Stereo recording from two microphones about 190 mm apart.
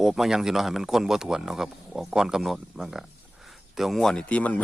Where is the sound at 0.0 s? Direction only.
Centre (ahead or behind).